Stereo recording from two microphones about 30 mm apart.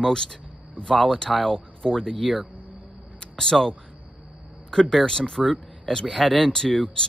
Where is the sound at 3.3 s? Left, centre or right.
Centre.